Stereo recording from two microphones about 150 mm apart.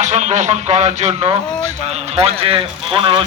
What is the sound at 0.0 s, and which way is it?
A man's voice, 50° right (ahead or behind).